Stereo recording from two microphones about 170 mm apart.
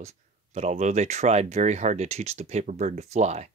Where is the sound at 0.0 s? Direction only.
40° right (ahead or behind).